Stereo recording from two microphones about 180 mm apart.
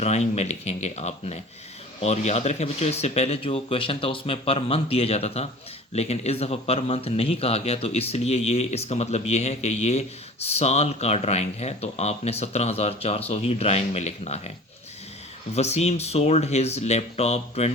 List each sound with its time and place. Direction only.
0.0 s a man's voice: 35° left (ahead or behind)
15.5 s a man's voice: 35° left (ahead or behind)